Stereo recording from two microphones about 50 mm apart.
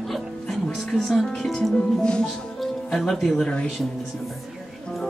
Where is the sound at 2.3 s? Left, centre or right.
Centre.